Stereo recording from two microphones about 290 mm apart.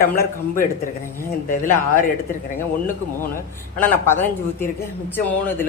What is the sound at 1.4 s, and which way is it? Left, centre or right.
Speech, left.